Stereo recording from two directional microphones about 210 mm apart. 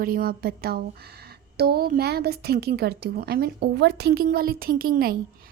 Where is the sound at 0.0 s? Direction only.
45° right (ahead or behind).